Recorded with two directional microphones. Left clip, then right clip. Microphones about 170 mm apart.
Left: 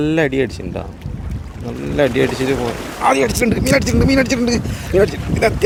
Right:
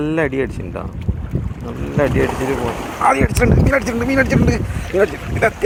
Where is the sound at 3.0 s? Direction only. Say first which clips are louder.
Left 1 dB; 20° left (ahead or behind).